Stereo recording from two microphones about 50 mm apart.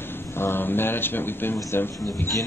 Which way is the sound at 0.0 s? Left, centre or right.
Left.